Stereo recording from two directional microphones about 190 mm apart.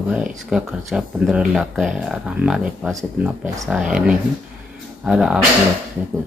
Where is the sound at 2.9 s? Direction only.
15° right (ahead or behind).